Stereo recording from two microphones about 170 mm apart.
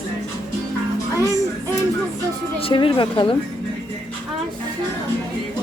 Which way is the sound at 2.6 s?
30° left (ahead or behind).